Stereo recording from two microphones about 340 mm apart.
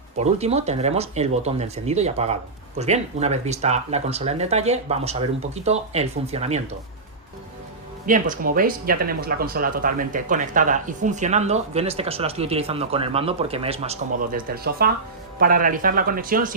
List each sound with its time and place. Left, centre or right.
0.2 s speech: centre
8.0 s speech: right